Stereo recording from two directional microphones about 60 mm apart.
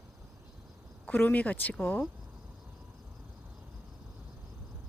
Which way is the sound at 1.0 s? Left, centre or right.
Left.